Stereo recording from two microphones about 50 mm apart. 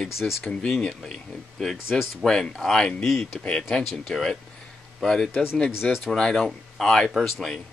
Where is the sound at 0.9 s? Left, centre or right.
Centre.